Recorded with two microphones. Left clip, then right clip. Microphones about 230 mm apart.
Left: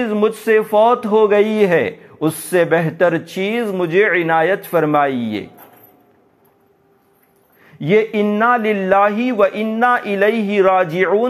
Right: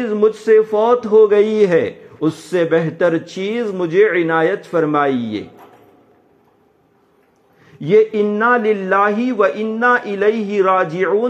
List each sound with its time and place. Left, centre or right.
0.0 s speech: left
7.6 s speech: left